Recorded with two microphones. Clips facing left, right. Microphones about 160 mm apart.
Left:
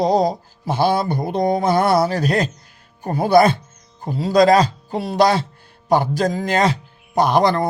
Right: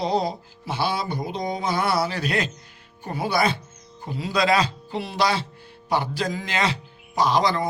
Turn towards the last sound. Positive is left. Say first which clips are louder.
# left 5 dB
turn(degrees=55)  # may be behind; listen again after turning